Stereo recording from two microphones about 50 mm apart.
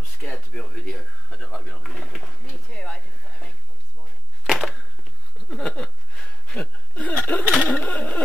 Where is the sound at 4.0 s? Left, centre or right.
Centre.